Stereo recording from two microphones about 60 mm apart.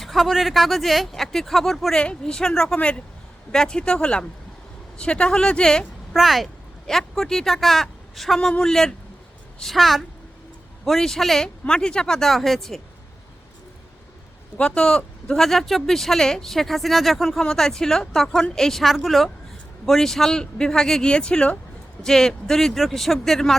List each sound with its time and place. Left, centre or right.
0.0 s speech: centre
2.0 s speech: centre
2.7 s speech: centre
3.5 s speech: centre
6.1 s speech: centre
8.4 s speech: centre
14.6 s speech: centre